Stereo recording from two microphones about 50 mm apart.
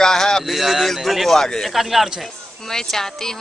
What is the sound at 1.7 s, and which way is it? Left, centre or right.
Speech, centre.